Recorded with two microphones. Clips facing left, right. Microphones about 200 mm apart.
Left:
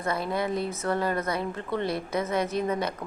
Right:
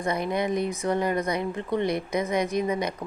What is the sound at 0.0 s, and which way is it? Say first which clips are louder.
A woman's voice: right 2 dB; 15° right (ahead or behind).